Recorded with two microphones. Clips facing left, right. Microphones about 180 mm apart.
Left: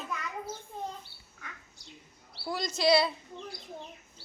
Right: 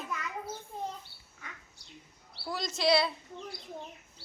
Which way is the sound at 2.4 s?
Centre (ahead or behind).